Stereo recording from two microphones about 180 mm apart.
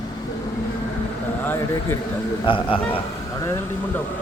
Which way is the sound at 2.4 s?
30° left (ahead or behind).